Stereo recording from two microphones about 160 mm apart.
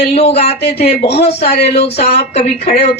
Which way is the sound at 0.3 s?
40° left (ahead or behind).